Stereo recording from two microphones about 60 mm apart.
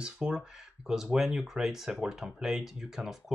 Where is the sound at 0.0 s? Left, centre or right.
Centre.